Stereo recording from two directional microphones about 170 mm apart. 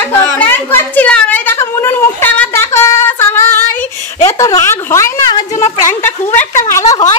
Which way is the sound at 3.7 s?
15° left (ahead or behind).